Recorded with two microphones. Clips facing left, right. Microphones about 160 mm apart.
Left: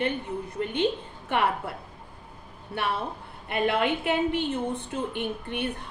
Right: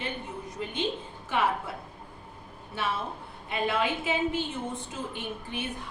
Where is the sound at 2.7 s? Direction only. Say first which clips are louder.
Left 2 dB; 60° left (ahead or behind).